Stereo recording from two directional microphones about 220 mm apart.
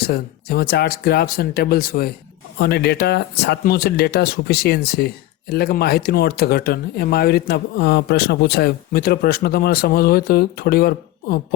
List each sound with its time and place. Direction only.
0.1 s speech: 45° left (ahead or behind)